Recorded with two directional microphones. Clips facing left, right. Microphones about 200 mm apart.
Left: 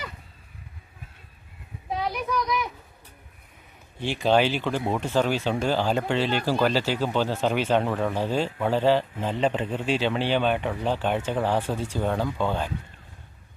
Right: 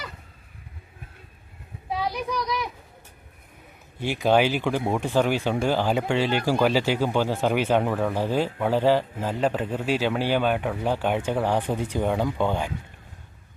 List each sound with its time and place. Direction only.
2.4 s speech: 35° right (ahead or behind)
3.9 s speech: 10° right (ahead or behind)